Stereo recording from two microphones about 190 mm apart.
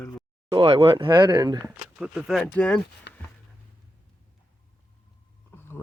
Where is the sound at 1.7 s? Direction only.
5° right (ahead or behind).